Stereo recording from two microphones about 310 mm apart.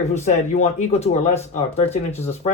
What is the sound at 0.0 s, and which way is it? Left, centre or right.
Speech, left.